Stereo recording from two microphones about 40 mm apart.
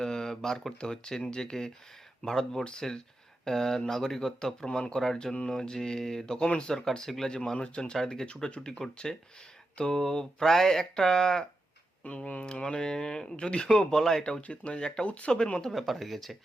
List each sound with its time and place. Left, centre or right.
0.0 s a sound: centre
0.8 s speech: centre
8.0 s speech: centre
8.3 s speech: left
9.1 s speech: centre
12.0 s speech: left; by 14.3 s centre
14.4 s speech: left
15.7 s speech: centre